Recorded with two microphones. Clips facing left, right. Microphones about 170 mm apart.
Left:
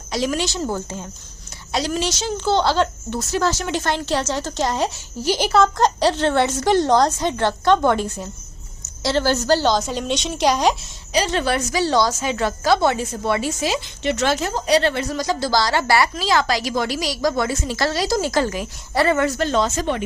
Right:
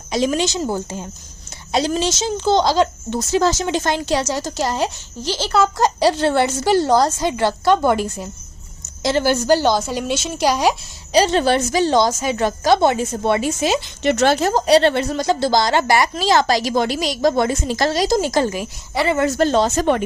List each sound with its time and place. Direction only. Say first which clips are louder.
0.1 s a woman's voice: right 4 dB; 20° right (ahead or behind)
1.7 s a woman's voice: right 3 dB; 25° right (ahead or behind); by 4.9 s centre (ahead or behind)
5.2 s speech: left 3 dB; 15° left (ahead or behind)
5.5 s a woman's voice: right 1 dB; 5° right (ahead or behind)
11.1 s a woman's voice: right 5 dB; 30° right (ahead or behind)
14.0 s a woman's voice: right 5 dB; 45° right (ahead or behind); by 16.5 s 25° right (ahead or behind)
16.5 s speech: right 4 dB; 40° right (ahead or behind)
16.7 s a woman's voice: right 3 dB; 25° right (ahead or behind)
19.4 s speech: right 4 dB; 35° right (ahead or behind)
19.8 s speech: right 5 dB; 50° right (ahead or behind)